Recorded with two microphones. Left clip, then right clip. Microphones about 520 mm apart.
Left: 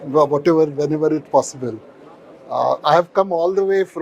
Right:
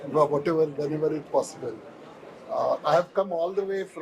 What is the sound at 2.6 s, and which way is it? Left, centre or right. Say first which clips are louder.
Speech: left 8 dB; left.